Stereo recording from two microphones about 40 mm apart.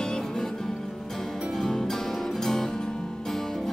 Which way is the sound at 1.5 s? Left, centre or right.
Centre.